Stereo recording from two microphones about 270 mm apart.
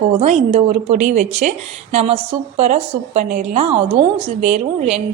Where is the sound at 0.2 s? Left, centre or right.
Right.